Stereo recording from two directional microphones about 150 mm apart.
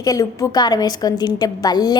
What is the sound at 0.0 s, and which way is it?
A woman's voice, 25° left (ahead or behind).